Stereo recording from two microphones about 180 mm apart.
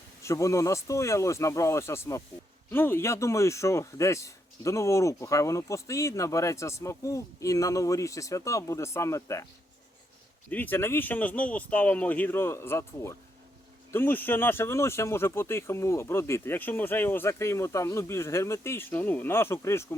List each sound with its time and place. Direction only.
0.2 s a man's voice: 15° left (ahead or behind)
10.5 s a man's voice: 10° left (ahead or behind)